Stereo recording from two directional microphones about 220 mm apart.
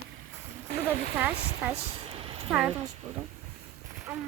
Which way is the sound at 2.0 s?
25° right (ahead or behind).